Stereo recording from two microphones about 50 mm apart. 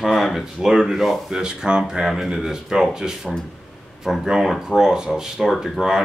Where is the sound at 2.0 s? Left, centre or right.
Centre.